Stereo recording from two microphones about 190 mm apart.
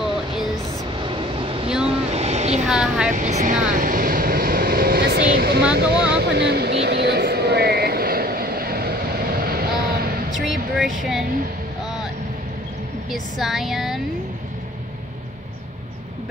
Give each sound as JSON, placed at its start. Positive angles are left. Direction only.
{"t": 1.0, "sound": "vehicle", "side_deg": -25}
{"t": 2.6, "sound": "speech", "side_deg": -5}
{"t": 3.1, "sound": "vehicle", "side_deg": -40}
{"t": 10.3, "sound": "speech", "side_deg": 0}
{"t": 13.1, "sound": "speech", "side_deg": 0}